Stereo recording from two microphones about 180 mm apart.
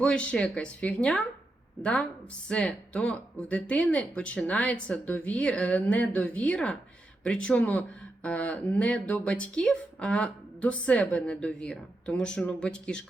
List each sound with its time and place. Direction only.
0.0 s a woman's voice: 5° left (ahead or behind)